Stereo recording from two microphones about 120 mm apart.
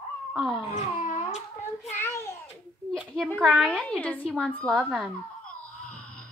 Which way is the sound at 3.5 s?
5° left (ahead or behind).